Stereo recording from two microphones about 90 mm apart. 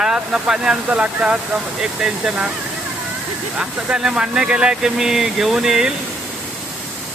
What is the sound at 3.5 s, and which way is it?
Speech, 10° right (ahead or behind).